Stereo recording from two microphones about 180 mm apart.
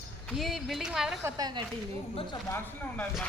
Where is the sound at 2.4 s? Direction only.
15° left (ahead or behind).